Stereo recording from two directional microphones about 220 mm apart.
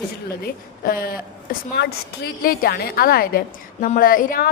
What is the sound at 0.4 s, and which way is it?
A woman's voice, 40° left (ahead or behind).